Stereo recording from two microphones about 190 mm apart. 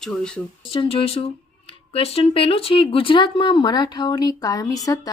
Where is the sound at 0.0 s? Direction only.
5° left (ahead or behind).